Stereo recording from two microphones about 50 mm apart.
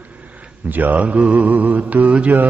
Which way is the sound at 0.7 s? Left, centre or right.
Right.